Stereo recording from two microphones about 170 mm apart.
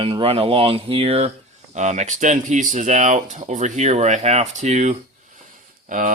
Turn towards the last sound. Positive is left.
turn(degrees=-50)  # may be behind; listen again after turning